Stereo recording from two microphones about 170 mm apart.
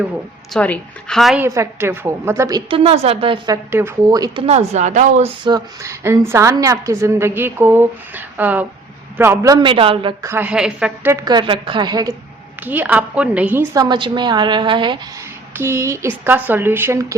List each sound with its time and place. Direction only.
0.5 s a woman's voice: 5° left (ahead or behind)
1.4 s a woman's voice: 15° right (ahead or behind)
4.4 s speech: 40° right (ahead or behind)
5.5 s a woman's voice: 20° right (ahead or behind)
10.2 s a woman's voice: 10° right (ahead or behind)
11.1 s a woman's voice: 20° right (ahead or behind)
12.6 s a woman's voice: 10° right (ahead or behind)
13.7 s a woman's voice: 25° right (ahead or behind)
15.5 s a woman's voice: 15° right (ahead or behind)